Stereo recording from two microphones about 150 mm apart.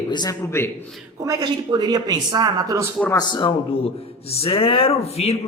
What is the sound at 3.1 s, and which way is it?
A man's voice, 30° left (ahead or behind).